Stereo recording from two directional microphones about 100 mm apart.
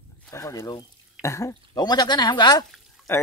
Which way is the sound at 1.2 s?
30° left (ahead or behind).